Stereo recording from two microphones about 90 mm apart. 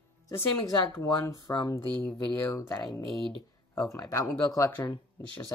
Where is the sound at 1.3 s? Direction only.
50° left (ahead or behind).